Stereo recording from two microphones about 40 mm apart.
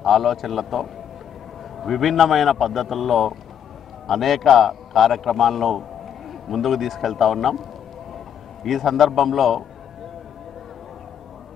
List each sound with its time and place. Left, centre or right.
0.0 s a man's voice: centre
8.6 s a man's voice: centre